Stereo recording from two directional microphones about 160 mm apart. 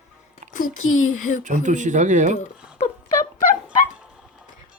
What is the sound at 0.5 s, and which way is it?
Speech, 55° left (ahead or behind).